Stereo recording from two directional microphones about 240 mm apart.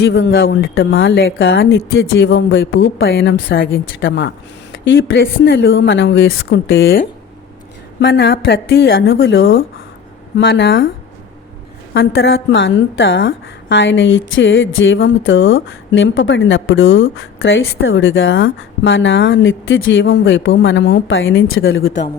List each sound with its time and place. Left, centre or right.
0.0 s a woman's voice: left
11.9 s a woman's voice: left